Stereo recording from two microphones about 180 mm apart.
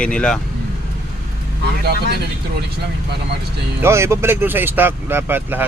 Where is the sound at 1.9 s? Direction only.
65° right (ahead or behind).